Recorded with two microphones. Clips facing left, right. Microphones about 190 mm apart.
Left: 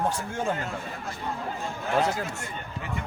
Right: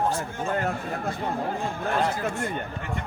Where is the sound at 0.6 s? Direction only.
55° right (ahead or behind).